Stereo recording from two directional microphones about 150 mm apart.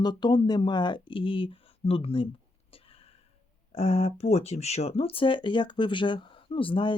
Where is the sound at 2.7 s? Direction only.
40° left (ahead or behind).